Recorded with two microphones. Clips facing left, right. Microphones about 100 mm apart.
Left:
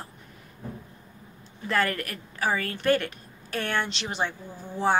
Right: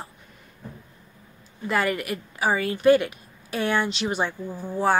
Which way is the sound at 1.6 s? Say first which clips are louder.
Right 2 dB; 10° right (ahead or behind).